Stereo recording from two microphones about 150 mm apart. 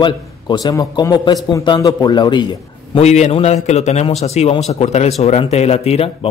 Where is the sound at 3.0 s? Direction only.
45° left (ahead or behind).